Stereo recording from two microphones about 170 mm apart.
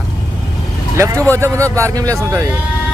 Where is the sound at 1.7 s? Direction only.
20° right (ahead or behind).